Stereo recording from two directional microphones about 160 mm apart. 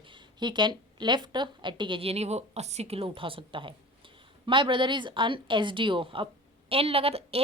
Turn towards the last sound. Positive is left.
turn(degrees=-40)  # may be behind; listen again after turning